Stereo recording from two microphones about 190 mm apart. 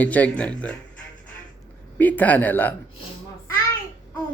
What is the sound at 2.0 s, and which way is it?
Speech, 10° left (ahead or behind).